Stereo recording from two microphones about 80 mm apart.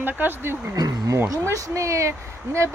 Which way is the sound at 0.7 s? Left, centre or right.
Right.